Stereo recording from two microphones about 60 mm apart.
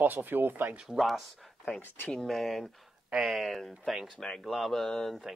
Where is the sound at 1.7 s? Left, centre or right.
Left.